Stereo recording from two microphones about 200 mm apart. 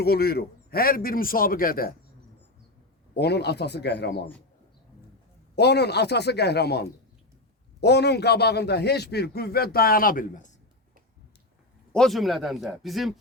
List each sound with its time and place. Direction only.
0.0 s a man's voice: 50° left (ahead or behind)
3.2 s speech: 55° left (ahead or behind)
5.5 s a man's voice: 55° left (ahead or behind)
11.9 s speech: centre (ahead or behind)